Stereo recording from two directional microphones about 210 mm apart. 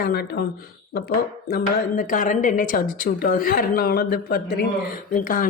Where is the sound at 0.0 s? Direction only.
50° left (ahead or behind).